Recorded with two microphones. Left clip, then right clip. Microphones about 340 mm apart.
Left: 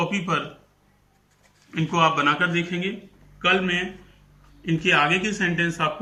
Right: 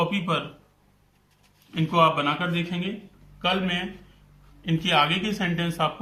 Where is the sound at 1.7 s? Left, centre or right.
Centre.